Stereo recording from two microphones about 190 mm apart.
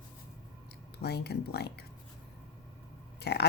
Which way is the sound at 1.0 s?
60° left (ahead or behind).